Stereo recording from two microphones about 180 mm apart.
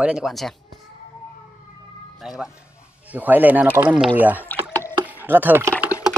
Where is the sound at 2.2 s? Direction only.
Centre (ahead or behind).